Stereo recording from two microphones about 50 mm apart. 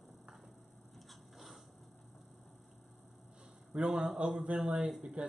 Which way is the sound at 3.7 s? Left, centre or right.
Centre.